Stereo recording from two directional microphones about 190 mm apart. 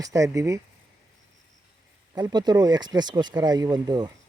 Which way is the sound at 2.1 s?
20° right (ahead or behind).